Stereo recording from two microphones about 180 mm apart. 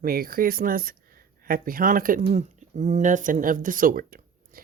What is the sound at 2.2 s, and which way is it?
Speech, 35° right (ahead or behind).